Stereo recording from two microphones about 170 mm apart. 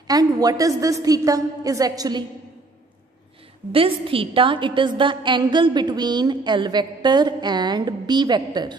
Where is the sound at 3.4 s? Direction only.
30° right (ahead or behind).